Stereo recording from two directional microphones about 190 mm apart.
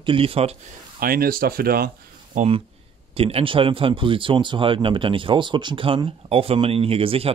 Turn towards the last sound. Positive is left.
turn(degrees=-30)  # may be behind; listen again after turning